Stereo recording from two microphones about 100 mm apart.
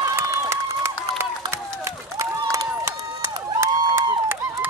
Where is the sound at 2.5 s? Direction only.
25° right (ahead or behind).